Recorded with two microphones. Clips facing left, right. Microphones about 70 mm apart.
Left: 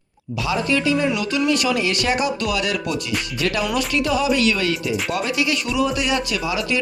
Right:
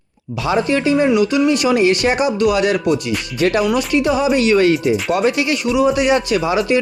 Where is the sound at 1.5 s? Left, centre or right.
Right.